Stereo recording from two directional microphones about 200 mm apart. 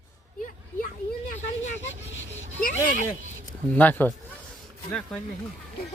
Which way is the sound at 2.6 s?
40° left (ahead or behind).